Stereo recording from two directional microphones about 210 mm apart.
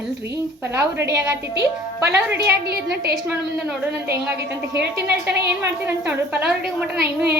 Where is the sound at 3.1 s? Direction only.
5° right (ahead or behind).